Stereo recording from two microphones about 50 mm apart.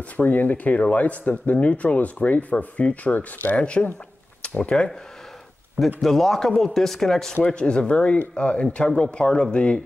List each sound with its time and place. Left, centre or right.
0.2 s speech: left
3.6 s speech: left
4.4 s a sound: left
5.9 s a man's voice: centre
7.4 s speech: left